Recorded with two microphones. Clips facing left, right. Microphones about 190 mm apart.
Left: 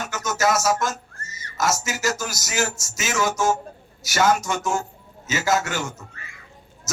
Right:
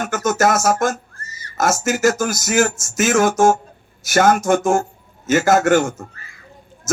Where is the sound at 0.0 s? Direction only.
50° right (ahead or behind).